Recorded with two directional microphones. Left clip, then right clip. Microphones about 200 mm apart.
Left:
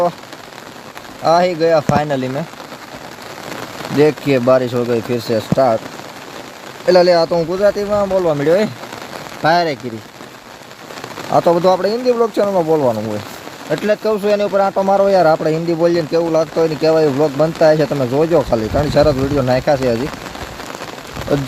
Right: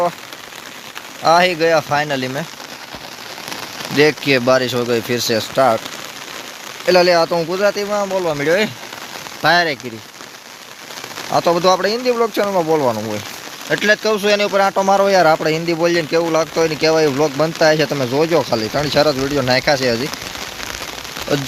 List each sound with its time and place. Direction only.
1.3 s speech: centre (ahead or behind)
3.9 s speech: centre (ahead or behind)
6.8 s speech: centre (ahead or behind)
11.5 s speech: centre (ahead or behind)
12.5 s speech: 10° right (ahead or behind)
13.7 s speech: 5° right (ahead or behind)
14.7 s speech: 15° right (ahead or behind)
15.0 s speech: centre (ahead or behind)
17.2 s speech: 15° right (ahead or behind)
17.4 s speech: centre (ahead or behind)